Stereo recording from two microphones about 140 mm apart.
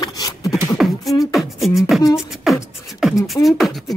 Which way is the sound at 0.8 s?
5° right (ahead or behind).